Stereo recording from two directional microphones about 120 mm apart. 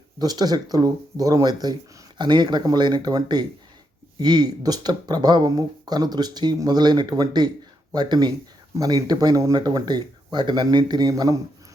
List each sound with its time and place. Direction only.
0.2 s speech: 35° right (ahead or behind)